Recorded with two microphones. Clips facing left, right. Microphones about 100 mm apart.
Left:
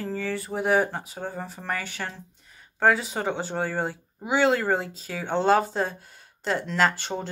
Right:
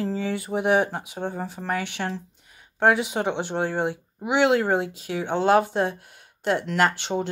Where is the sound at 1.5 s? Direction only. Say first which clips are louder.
Right 3 dB; 5° right (ahead or behind).